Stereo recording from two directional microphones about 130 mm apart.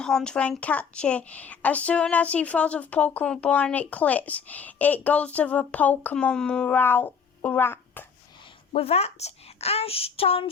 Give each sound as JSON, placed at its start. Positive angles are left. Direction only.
{"t": 0.0, "sound": "a woman's voice", "side_deg": 5}
{"t": 8.7, "sound": "a woman's voice", "side_deg": 50}